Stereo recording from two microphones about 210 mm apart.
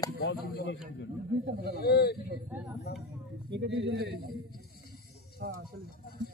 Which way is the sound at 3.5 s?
55° right (ahead or behind).